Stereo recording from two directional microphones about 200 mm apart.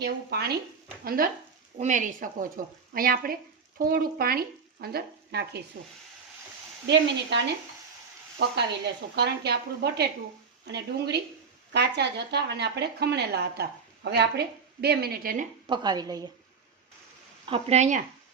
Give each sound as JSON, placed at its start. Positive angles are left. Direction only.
{"t": 0.0, "sound": "speech", "side_deg": -55}
{"t": 6.8, "sound": "speech", "side_deg": -60}
{"t": 8.4, "sound": "speech", "side_deg": -55}
{"t": 15.6, "sound": "a woman's voice", "side_deg": -20}
{"t": 17.4, "sound": "speech", "side_deg": -30}